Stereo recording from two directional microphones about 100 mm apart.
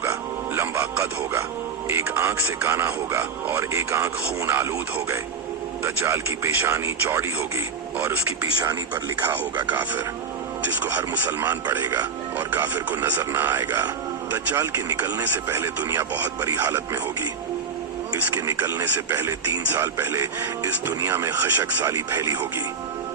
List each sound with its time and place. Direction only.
0.0 s music: 25° right (ahead or behind)
2.1 s speech: 25° right (ahead or behind)
11.9 s speech: 35° right (ahead or behind)
12.5 s speech: 20° right (ahead or behind)
14.5 s speech: 30° right (ahead or behind)
18.1 s speech: 35° right (ahead or behind)